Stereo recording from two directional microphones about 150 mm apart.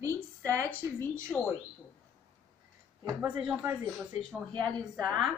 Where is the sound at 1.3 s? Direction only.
5° left (ahead or behind).